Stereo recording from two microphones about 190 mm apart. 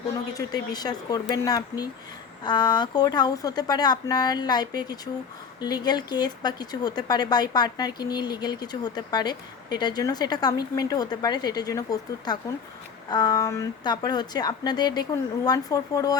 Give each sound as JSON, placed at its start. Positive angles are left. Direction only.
{"t": 0.3, "sound": "speech", "side_deg": 20}